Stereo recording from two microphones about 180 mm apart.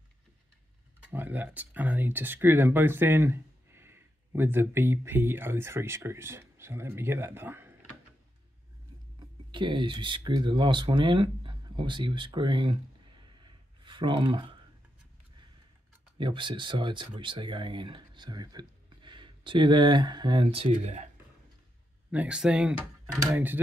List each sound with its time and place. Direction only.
1.1 s speech: 10° right (ahead or behind)
9.5 s speech: 25° right (ahead or behind)
13.4 s a sound: 25° right (ahead or behind)
16.2 s speech: 25° right (ahead or behind)
22.1 s speech: 5° right (ahead or behind)